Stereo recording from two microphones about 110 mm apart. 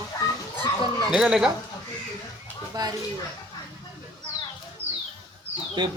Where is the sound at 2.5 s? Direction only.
15° left (ahead or behind).